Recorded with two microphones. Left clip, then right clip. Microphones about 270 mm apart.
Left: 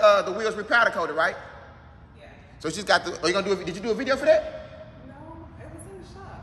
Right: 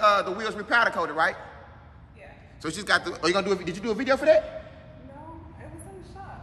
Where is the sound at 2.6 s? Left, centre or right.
Centre.